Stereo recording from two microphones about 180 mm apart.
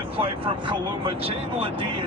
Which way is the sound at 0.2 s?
30° right (ahead or behind).